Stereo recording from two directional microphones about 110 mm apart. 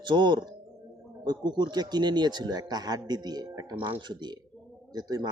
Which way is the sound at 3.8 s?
50° right (ahead or behind).